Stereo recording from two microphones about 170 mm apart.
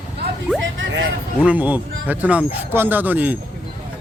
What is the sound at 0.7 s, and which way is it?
Music, 90° right.